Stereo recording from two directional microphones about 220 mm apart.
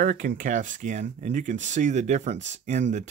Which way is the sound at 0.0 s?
40° right (ahead or behind).